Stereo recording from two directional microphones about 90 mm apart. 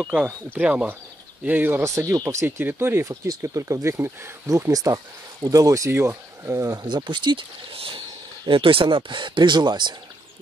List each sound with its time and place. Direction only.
0.1 s speech: 15° right (ahead or behind)
1.8 s speech: 35° right (ahead or behind)
2.4 s speech: 25° right (ahead or behind)
3.1 s speech: 40° right (ahead or behind)
6.9 s speech: 60° right (ahead or behind)